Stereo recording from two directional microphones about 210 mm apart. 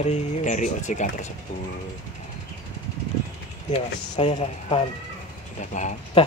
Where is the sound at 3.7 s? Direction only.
30° left (ahead or behind).